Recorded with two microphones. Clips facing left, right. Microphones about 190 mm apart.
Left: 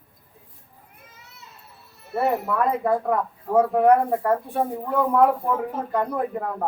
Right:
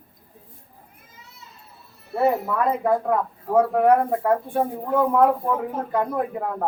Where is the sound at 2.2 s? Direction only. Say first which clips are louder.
Right 2 dB; centre (ahead or behind).